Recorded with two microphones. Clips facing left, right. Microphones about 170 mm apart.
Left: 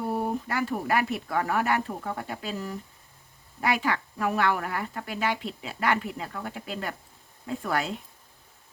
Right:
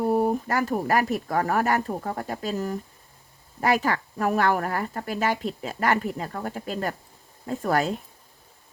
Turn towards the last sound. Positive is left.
turn(degrees=-40)  # may be behind; listen again after turning